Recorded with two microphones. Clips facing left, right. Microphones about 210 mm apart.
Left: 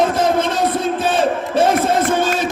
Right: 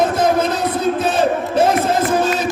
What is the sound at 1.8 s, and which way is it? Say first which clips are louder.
Music: even; 30° left (ahead or behind).